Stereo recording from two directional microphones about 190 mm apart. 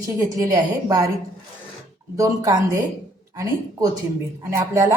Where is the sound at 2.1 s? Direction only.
20° right (ahead or behind).